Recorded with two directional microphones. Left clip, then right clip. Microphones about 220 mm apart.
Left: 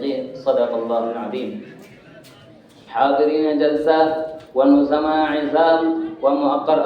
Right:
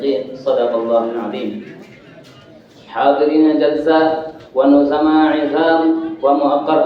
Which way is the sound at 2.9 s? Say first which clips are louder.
Right 3 dB; 20° left (ahead or behind).